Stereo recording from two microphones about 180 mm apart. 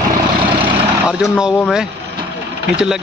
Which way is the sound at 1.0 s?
5° right (ahead or behind).